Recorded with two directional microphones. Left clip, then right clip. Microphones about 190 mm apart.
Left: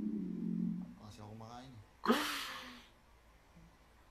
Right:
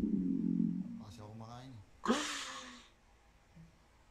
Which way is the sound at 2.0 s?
15° right (ahead or behind).